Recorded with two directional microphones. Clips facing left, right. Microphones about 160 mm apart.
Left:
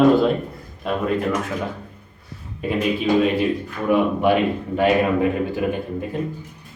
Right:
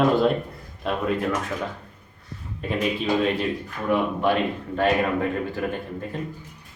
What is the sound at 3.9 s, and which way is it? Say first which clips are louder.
Speech: left 4 dB; 10° left (ahead or behind).